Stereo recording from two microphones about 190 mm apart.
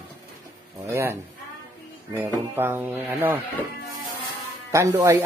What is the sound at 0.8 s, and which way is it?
Speech, 15° right (ahead or behind).